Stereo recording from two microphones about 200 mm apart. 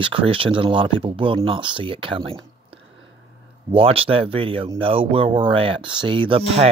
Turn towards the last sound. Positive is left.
turn(degrees=-25)  # may be behind; listen again after turning